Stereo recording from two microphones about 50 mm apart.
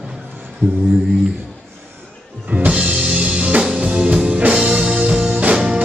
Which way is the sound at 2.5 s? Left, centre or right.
Right.